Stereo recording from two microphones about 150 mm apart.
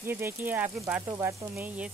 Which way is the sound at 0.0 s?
15° right (ahead or behind).